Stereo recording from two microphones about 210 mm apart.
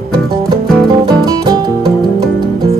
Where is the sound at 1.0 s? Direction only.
20° right (ahead or behind).